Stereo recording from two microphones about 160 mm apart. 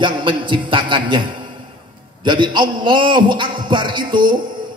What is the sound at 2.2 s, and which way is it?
A man's voice, 30° right (ahead or behind).